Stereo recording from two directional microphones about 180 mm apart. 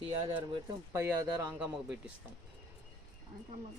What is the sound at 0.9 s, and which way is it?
Speech, 15° right (ahead or behind).